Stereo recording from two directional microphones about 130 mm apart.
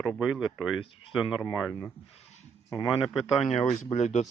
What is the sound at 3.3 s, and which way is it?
Speech, 55° left (ahead or behind).